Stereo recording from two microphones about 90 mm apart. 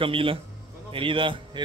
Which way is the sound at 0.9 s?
75° right (ahead or behind).